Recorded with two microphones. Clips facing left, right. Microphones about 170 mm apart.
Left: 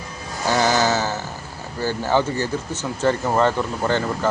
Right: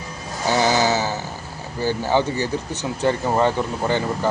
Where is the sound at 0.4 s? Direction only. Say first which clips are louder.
Even; 15° right (ahead or behind).